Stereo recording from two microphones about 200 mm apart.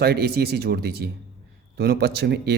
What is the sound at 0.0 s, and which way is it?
Speech, 50° right (ahead or behind).